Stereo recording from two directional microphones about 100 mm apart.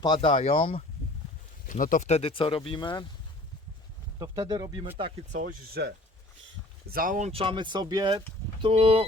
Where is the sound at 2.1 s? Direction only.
65° left (ahead or behind).